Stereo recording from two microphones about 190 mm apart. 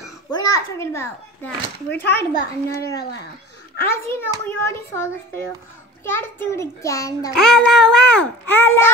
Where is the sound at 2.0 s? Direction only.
60° left (ahead or behind).